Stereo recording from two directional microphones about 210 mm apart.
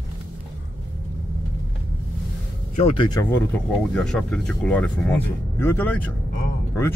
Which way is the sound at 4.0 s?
5° left (ahead or behind).